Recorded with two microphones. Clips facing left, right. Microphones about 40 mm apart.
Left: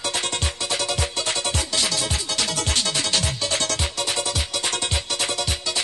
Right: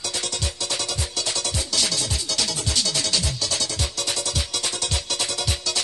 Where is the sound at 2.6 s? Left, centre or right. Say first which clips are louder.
Left 1 dB; left.